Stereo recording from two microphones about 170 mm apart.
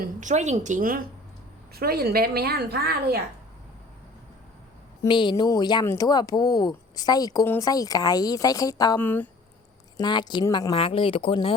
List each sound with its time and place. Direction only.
0.0 s a woman's voice: 45° right (ahead or behind); by 3.2 s 65° right (ahead or behind)
5.0 s speech: 30° left (ahead or behind)
9.0 s speech: 10° left (ahead or behind)
10.0 s speech: 25° left (ahead or behind)